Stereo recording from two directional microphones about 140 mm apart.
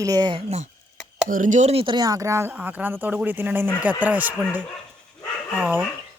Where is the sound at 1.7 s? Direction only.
40° right (ahead or behind).